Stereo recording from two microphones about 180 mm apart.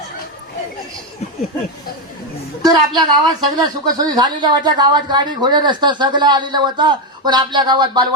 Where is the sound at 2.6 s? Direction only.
20° right (ahead or behind).